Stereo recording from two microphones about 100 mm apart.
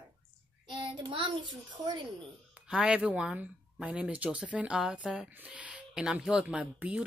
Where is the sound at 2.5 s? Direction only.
5° right (ahead or behind).